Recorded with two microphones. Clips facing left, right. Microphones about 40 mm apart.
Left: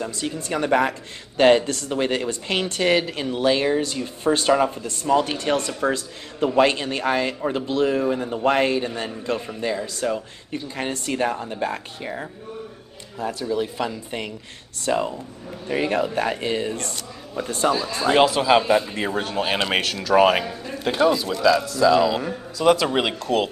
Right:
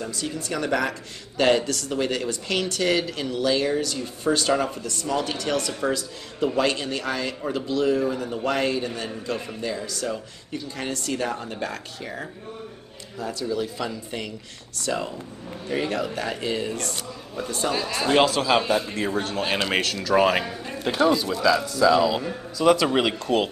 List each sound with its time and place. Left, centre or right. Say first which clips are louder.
0.0 s speech: left 2 dB; left
5.7 s speech: left 2 dB; centre
5.9 s speech: left 2 dB; left
13.2 s speech: left 3 dB; left
17.7 s a man's voice: left 5 dB; left
18.0 s a man's voice: left 3 dB; centre